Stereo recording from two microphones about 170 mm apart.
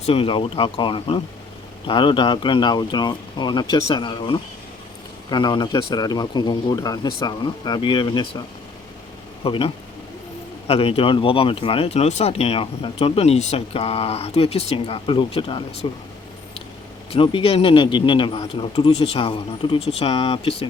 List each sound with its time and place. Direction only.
0.0 s speech: 35° left (ahead or behind)
9.4 s speech: 30° left (ahead or behind)
17.1 s speech: 35° left (ahead or behind)